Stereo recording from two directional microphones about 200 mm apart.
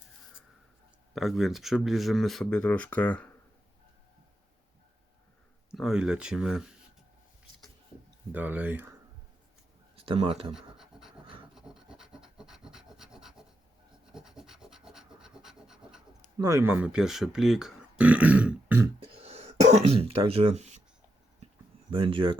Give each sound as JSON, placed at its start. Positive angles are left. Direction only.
{"t": 1.1, "sound": "speech", "side_deg": 0}
{"t": 5.7, "sound": "speech", "side_deg": 0}
{"t": 8.3, "sound": "speech", "side_deg": -10}
{"t": 9.9, "sound": "speech", "side_deg": -25}
{"t": 10.5, "sound": "scratch", "side_deg": 0}
{"t": 11.5, "sound": "rub", "side_deg": -5}
{"t": 16.4, "sound": "speech", "side_deg": -15}
{"t": 18.9, "sound": "throat clearing", "side_deg": -30}
{"t": 21.8, "sound": "speech", "side_deg": -25}